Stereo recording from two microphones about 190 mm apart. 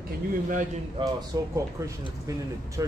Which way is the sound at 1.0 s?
25° right (ahead or behind).